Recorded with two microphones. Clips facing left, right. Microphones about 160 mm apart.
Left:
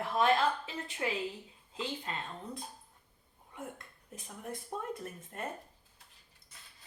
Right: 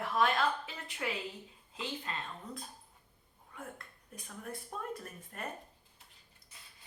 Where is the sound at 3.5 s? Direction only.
20° left (ahead or behind).